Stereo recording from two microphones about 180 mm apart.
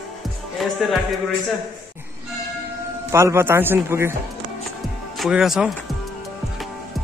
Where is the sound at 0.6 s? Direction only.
Centre (ahead or behind).